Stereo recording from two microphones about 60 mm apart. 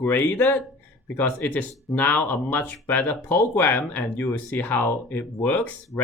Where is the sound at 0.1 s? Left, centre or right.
Left.